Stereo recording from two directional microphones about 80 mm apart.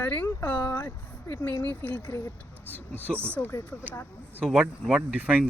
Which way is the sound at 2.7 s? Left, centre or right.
Left.